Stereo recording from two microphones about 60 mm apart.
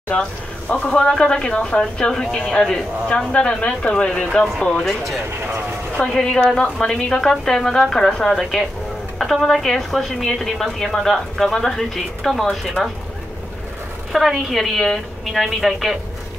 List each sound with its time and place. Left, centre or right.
0.8 s a woman's voice: centre
5.9 s a woman's voice: centre
14.1 s a woman's voice: centre